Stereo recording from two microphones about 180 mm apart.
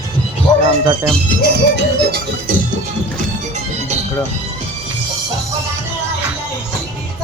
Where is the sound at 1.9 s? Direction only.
60° right (ahead or behind).